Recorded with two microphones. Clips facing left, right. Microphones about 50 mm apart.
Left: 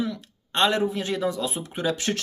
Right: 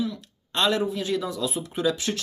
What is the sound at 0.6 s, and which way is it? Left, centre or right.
Speech, left.